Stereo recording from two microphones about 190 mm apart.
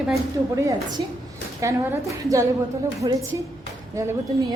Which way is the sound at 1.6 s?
15° right (ahead or behind).